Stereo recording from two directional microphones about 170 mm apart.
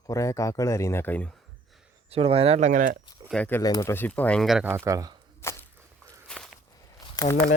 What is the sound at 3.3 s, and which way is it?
Speech, 10° left (ahead or behind).